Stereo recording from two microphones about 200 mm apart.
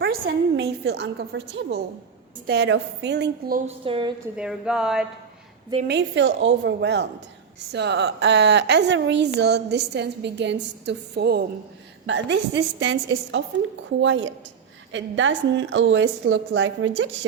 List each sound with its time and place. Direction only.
0.0 s a woman's voice: 55° right (ahead or behind)
3.7 s a woman's voice: 25° right (ahead or behind)
4.4 s speech: 5° right (ahead or behind)
5.9 s a woman's voice: 65° right (ahead or behind)